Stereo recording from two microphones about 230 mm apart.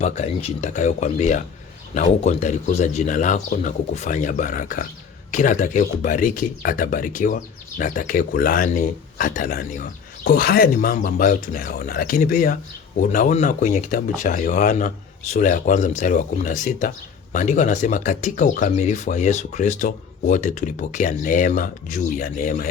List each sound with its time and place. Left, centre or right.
0.0 s speech: left